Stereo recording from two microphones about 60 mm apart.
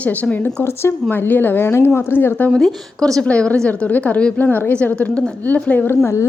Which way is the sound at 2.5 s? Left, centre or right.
Centre.